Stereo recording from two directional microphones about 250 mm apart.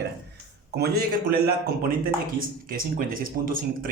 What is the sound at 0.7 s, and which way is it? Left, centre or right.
Speech, right.